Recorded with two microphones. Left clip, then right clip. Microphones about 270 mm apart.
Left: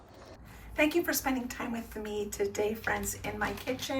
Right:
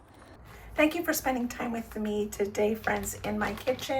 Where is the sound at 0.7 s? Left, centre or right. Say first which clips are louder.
Right 2 dB; centre.